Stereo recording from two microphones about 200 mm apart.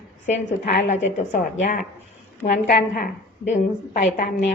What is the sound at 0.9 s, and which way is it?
Speech, 35° left (ahead or behind).